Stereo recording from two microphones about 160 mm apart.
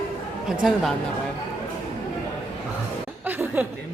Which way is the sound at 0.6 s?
Centre (ahead or behind).